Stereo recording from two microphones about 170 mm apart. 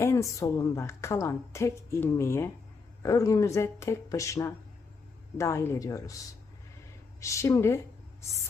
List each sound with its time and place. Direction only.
0.0 s a woman's voice: 15° left (ahead or behind)
7.2 s a woman's voice: 15° left (ahead or behind)